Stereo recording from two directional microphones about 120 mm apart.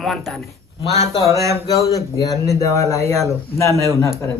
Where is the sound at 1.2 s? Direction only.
30° right (ahead or behind).